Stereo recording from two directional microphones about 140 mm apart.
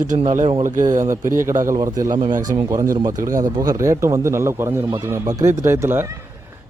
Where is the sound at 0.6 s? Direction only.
65° right (ahead or behind).